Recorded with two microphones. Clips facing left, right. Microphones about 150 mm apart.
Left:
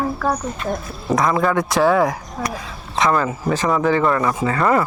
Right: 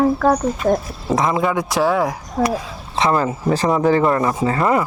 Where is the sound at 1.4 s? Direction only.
10° right (ahead or behind).